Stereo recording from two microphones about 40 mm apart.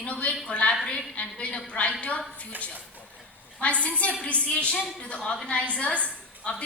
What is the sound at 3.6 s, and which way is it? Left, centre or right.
A woman's voice, left.